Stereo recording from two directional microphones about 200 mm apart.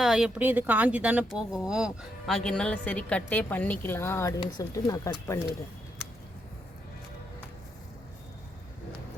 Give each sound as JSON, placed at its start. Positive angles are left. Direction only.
{"t": 0.0, "sound": "speech", "side_deg": -5}